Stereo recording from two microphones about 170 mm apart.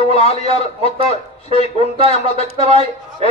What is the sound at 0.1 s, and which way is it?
A man's voice, 35° left (ahead or behind).